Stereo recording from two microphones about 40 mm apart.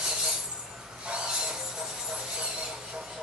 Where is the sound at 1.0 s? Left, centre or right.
Right.